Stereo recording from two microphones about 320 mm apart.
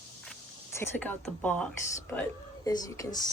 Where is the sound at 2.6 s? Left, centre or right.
Centre.